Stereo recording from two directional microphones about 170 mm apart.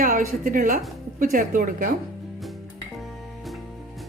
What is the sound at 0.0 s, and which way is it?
A woman's voice, 55° right (ahead or behind).